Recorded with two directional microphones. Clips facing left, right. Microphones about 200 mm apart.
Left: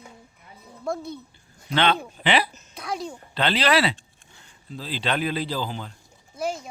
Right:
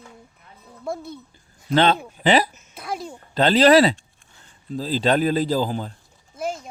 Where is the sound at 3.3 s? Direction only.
45° right (ahead or behind).